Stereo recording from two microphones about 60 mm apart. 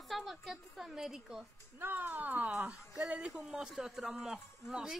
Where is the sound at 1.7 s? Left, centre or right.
Right.